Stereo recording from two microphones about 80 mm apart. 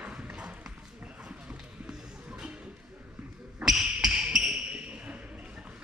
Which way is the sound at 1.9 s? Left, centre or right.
Centre.